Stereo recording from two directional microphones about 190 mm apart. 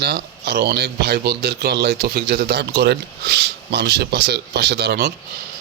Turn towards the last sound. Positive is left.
turn(degrees=-60)  # may be behind; listen again after turning